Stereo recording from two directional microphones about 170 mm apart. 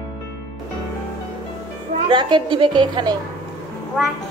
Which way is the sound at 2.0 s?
30° right (ahead or behind).